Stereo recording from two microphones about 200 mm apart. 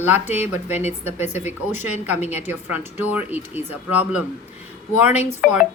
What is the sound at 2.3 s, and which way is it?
Speech, 35° left (ahead or behind).